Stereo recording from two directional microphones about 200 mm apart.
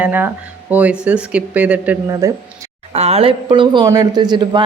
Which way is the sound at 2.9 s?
30° right (ahead or behind).